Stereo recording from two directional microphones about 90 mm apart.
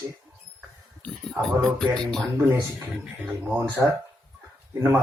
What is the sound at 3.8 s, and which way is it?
Speech, 25° right (ahead or behind).